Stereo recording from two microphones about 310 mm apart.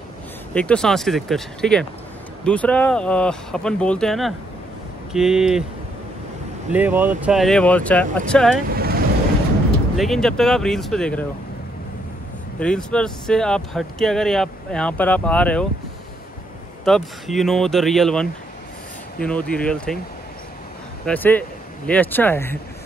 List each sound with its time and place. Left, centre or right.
0.6 s speech: centre
6.7 s speech: centre
8.6 s vehicle: right
9.9 s speech: centre
12.5 s speech: centre
16.8 s speech: centre
21.0 s speech: centre